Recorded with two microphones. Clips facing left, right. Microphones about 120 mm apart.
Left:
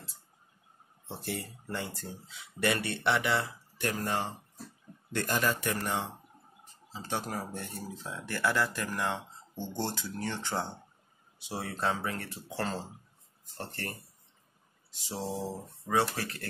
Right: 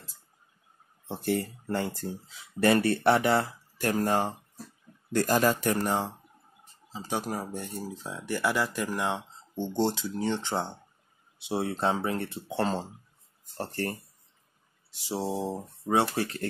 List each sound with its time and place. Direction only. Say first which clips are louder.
1.2 s speech: right 10 dB; 50° right (ahead or behind)
2.3 s speech: right 7 dB; 35° right (ahead or behind)
2.9 s speech: right 6 dB; 45° right (ahead or behind)
6.9 s speech: right 3 dB; 15° right (ahead or behind); by 13.9 s 35° right (ahead or behind)
15.0 s speech: right 5 dB; 15° right (ahead or behind)